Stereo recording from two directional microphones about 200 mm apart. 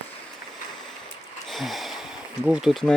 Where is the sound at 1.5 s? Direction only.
Centre (ahead or behind).